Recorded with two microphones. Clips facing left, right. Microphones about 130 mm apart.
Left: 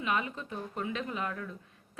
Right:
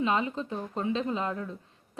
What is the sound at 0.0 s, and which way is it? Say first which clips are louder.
A woman's voice: right 5 dB; 30° right (ahead or behind).